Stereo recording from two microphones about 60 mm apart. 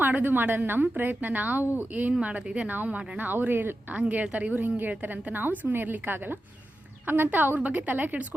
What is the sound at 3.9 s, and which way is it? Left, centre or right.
A woman's voice, right.